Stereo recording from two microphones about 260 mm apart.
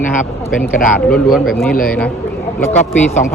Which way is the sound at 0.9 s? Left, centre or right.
Centre.